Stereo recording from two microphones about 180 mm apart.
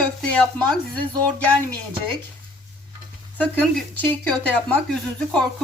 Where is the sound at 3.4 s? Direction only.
10° left (ahead or behind).